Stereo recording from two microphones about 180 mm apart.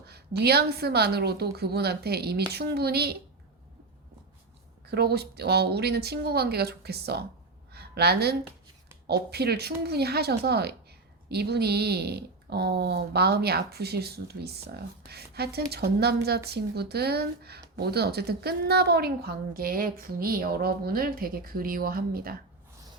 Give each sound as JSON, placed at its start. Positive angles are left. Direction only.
{"t": 0.0, "sound": "a woman's voice", "side_deg": -65}
{"t": 4.9, "sound": "a woman's voice", "side_deg": -65}
{"t": 7.7, "sound": "a sound", "side_deg": -65}
{"t": 9.0, "sound": "a woman's voice", "side_deg": -65}